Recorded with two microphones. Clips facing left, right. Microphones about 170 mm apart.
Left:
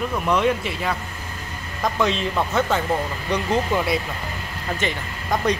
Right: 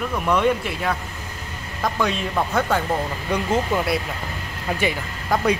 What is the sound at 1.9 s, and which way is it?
Speech, centre (ahead or behind).